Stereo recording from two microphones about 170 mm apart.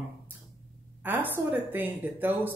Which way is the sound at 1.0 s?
10° right (ahead or behind).